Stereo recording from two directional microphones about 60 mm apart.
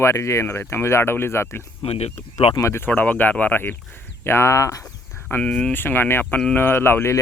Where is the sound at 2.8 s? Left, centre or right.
Left.